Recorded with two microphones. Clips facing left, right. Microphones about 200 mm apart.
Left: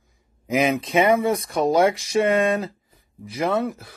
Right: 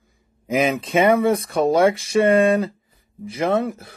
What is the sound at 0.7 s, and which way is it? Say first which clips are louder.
Speech: right 2 dB; 30° right (ahead or behind).